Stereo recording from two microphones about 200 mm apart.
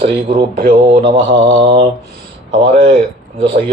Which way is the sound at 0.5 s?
45° right (ahead or behind).